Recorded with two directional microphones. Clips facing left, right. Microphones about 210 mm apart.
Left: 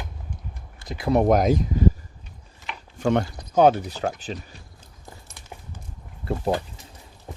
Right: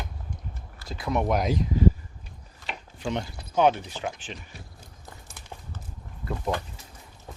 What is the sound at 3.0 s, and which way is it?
Speech, 65° left (ahead or behind).